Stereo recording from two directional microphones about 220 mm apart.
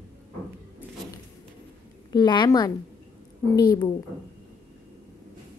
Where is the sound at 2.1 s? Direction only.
20° left (ahead or behind).